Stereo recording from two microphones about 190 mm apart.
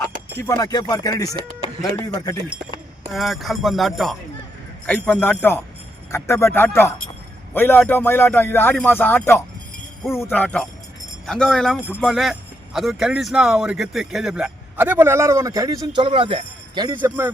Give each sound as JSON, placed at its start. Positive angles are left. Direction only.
{"t": 0.3, "sound": "speech", "side_deg": 20}
{"t": 3.1, "sound": "a man's voice", "side_deg": 0}
{"t": 17.0, "sound": "speech", "side_deg": -10}